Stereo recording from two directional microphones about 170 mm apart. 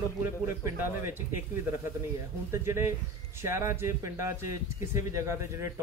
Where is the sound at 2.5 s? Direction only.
15° right (ahead or behind).